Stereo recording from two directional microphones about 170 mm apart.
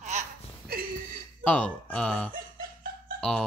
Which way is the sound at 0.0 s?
45° right (ahead or behind).